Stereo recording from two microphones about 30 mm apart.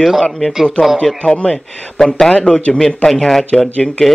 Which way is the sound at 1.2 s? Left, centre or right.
Left.